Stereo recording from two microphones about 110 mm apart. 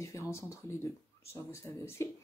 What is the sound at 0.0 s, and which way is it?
Speech, 25° left (ahead or behind).